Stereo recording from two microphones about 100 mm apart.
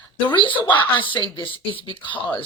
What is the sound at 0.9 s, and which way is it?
Speech, 55° left (ahead or behind).